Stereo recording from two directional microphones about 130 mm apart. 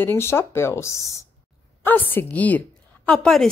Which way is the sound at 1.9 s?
15° left (ahead or behind).